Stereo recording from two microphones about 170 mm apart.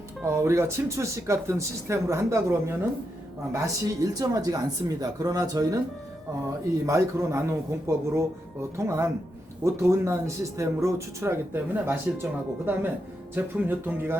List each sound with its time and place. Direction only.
0.3 s speech: 15° right (ahead or behind)
6.8 s speech: 15° right (ahead or behind)